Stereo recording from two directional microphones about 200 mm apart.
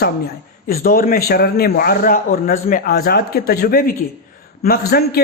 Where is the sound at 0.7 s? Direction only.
50° left (ahead or behind).